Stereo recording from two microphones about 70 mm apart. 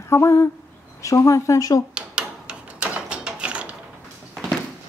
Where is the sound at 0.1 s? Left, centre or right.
Left.